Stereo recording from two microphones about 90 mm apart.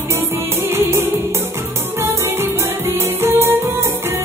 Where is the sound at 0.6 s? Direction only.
30° right (ahead or behind).